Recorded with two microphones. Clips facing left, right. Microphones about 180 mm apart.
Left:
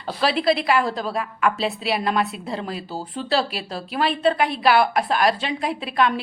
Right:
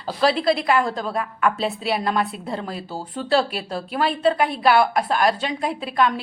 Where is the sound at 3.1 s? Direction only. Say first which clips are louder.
Right 3 dB; 50° right (ahead or behind).